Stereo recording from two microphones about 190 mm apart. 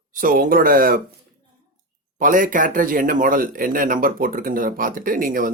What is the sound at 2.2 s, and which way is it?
Speech, 45° right (ahead or behind).